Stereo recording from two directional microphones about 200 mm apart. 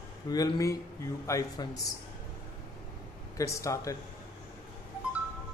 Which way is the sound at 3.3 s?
15° left (ahead or behind).